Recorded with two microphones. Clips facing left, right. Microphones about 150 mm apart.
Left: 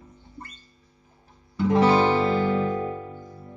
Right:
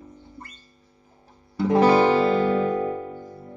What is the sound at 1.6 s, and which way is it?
Music, 35° right (ahead or behind).